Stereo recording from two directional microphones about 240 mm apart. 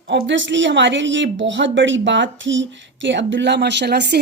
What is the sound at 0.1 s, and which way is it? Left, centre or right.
Speech, right.